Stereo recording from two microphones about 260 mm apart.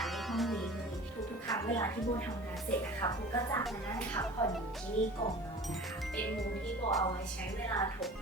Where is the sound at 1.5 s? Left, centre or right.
Centre.